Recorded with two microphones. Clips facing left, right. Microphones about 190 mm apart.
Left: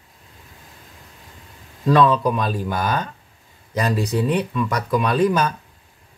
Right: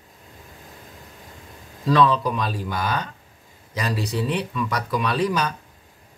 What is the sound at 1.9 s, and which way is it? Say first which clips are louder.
Speech: left 3 dB; 50° left (ahead or behind).